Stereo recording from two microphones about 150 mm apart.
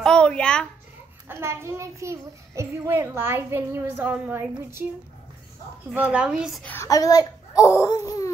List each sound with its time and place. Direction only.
0.0 s a sound: 5° left (ahead or behind)
1.3 s a child's voice: 15° right (ahead or behind)
5.9 s a woman's voice: 5° right (ahead or behind)
6.6 s speech: 15° left (ahead or behind)
6.9 s a child's voice: 25° left (ahead or behind)